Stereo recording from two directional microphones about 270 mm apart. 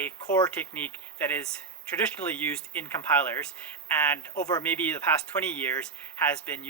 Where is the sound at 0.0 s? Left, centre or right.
Centre.